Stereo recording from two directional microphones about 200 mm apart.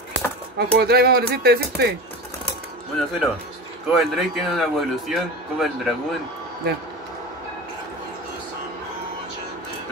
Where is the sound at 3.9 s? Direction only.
Centre (ahead or behind).